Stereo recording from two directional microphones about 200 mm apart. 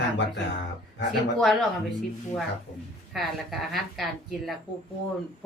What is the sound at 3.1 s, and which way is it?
A woman's voice, centre (ahead or behind).